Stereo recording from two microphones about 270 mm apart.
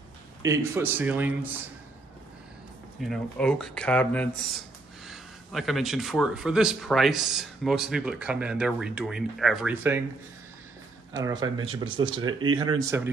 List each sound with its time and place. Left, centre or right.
0.4 s a man's voice: centre
3.0 s a man's voice: centre
11.1 s a man's voice: centre
11.4 s speech: right
11.8 s a man's voice: centre